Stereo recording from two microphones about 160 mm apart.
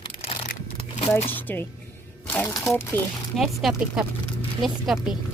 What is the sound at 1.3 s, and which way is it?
Speech, 10° left (ahead or behind).